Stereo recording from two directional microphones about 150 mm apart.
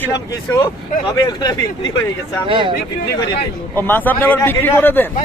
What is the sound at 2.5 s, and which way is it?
Speech, 30° right (ahead or behind).